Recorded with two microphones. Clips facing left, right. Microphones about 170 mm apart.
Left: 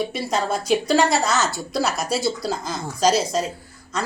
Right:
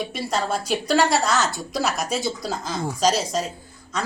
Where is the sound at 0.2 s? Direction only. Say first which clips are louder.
Left 1 dB; 10° left (ahead or behind).